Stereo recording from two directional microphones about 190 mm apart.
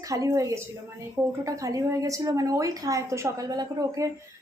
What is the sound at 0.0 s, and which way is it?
Speech, 20° right (ahead or behind).